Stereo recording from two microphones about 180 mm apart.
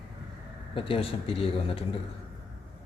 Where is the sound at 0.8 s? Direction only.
30° left (ahead or behind).